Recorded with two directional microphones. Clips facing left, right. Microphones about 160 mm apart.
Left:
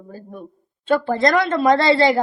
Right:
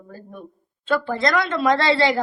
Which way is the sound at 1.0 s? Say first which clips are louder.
Left 4 dB; 40° left (ahead or behind).